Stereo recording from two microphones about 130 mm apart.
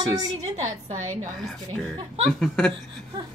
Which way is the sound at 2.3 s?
5° left (ahead or behind).